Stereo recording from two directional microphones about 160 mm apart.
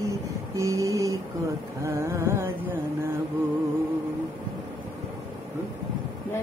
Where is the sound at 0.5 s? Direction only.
20° right (ahead or behind).